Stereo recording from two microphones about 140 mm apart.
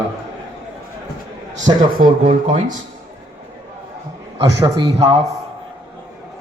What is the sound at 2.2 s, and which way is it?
Speech, 50° right (ahead or behind).